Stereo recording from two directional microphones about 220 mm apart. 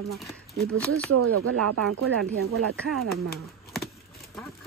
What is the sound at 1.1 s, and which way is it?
Speech, 80° right.